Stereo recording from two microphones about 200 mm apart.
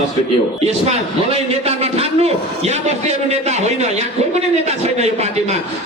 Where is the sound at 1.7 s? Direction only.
30° right (ahead or behind).